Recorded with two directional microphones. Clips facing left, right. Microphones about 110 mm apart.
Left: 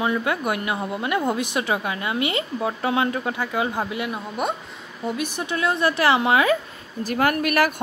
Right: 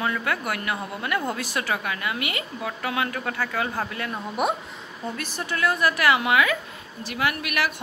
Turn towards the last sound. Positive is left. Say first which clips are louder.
# left 6 dB
turn(degrees=45)  # may be behind; listen again after turning